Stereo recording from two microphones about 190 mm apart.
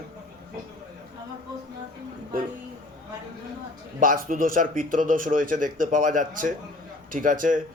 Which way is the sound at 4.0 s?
45° right (ahead or behind).